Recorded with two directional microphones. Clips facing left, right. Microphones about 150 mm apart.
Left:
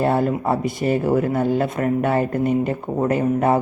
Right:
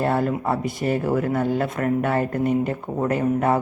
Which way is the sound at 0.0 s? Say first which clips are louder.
Left 3 dB; 20° left (ahead or behind).